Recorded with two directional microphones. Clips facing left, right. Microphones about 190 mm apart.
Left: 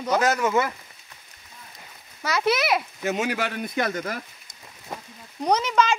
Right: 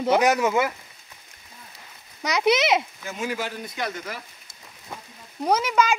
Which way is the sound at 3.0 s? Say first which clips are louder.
Left 4 dB; 75° left (ahead or behind).